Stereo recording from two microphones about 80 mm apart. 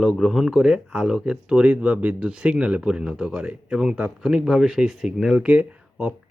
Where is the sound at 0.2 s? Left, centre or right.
Centre.